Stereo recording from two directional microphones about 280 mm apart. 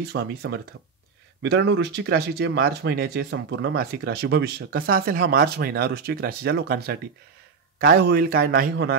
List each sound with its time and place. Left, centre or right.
0.1 s speech: right